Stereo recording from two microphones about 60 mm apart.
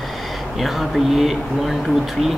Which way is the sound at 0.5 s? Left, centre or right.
Centre.